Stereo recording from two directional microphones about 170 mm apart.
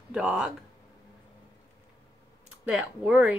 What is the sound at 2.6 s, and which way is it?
Speech, 10° right (ahead or behind).